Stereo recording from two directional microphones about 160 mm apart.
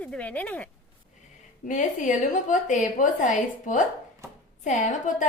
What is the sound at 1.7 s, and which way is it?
A woman's voice, 50° left (ahead or behind).